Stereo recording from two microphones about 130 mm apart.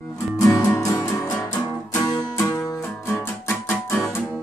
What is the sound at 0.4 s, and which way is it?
Music, 25° left (ahead or behind).